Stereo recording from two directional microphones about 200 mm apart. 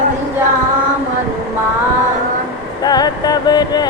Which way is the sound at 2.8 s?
20° left (ahead or behind).